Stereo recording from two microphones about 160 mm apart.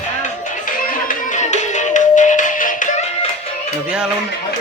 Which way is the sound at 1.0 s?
50° left (ahead or behind).